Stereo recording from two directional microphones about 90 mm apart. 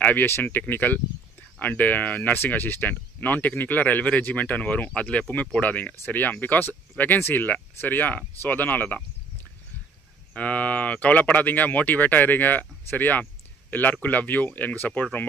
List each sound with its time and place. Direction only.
0.0 s speech: 20° left (ahead or behind)
10.3 s speech: 15° left (ahead or behind)